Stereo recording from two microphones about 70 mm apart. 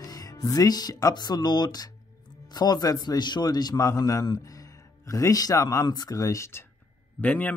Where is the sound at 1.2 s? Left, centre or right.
Left.